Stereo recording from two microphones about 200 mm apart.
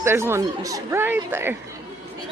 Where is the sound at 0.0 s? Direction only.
10° right (ahead or behind).